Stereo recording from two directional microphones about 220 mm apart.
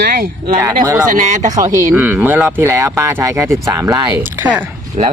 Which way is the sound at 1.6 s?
10° right (ahead or behind).